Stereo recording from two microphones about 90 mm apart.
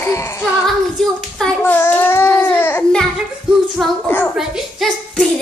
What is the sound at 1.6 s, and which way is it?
Babbling, 20° left (ahead or behind).